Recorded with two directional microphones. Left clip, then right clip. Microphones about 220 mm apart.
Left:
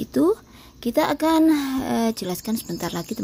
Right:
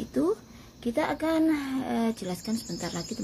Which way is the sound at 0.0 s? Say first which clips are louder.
Left 7 dB; 50° left (ahead or behind).